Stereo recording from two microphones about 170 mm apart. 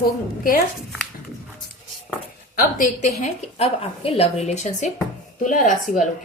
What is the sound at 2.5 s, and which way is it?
Speech, 50° left (ahead or behind).